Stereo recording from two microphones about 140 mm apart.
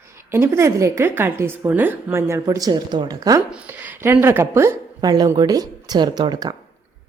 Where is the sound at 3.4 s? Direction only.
10° right (ahead or behind); by 6.5 s 30° right (ahead or behind).